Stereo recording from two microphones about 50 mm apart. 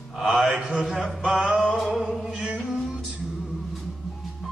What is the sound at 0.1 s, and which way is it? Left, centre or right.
Mantra, centre.